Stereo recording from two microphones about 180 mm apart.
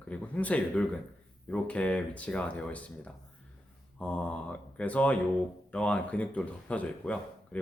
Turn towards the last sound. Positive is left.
turn(degrees=5)  # may be behind; listen again after turning